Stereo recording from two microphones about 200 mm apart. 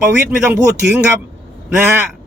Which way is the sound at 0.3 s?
10° right (ahead or behind).